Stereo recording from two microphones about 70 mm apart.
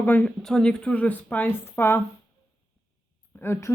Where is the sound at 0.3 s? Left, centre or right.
Centre; by 2.0 s left.